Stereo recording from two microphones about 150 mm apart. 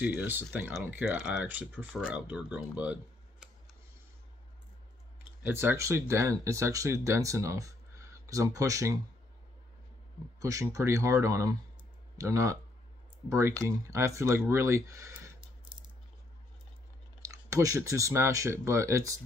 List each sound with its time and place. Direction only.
0.0 s speech: 10° right (ahead or behind)
5.4 s speech: 15° right (ahead or behind)
10.4 s speech: 20° right (ahead or behind)
17.3 s speech: 20° right (ahead or behind)